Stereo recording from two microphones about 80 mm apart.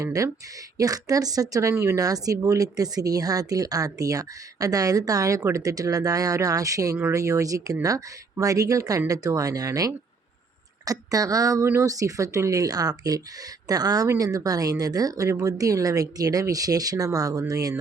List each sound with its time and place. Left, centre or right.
0.0 s speech: right